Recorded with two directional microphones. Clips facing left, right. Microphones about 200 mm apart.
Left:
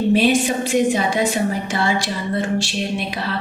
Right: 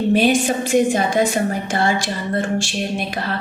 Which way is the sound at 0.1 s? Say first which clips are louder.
Right 1 dB; 45° right (ahead or behind).